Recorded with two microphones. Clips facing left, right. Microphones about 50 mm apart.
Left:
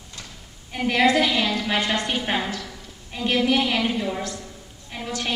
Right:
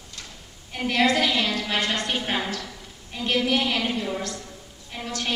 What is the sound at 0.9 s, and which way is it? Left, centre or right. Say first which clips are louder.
A woman's voice: left 2 dB; centre.